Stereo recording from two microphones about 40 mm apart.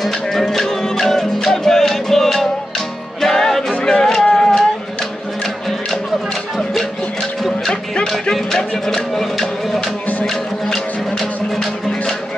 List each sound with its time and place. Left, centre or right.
0.0 s music: centre
7.6 s music: centre